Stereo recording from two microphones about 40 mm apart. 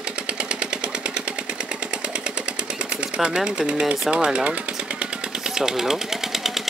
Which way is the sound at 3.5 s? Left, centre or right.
Right.